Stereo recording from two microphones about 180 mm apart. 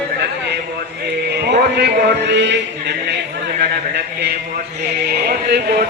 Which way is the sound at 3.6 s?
65° right (ahead or behind).